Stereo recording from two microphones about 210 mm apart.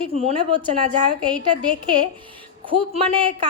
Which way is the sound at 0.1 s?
30° right (ahead or behind).